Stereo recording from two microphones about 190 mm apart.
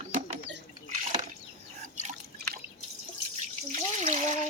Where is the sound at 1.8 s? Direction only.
40° right (ahead or behind).